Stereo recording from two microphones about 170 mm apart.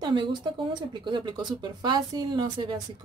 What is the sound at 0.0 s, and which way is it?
Speech, 25° right (ahead or behind).